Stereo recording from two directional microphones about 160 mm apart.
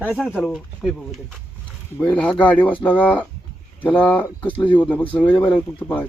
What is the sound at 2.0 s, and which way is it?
Speech, 10° left (ahead or behind).